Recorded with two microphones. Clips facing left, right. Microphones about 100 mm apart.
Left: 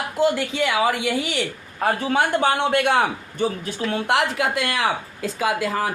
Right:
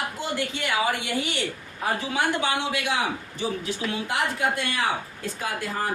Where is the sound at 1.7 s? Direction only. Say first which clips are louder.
Left 6 dB; 55° left (ahead or behind).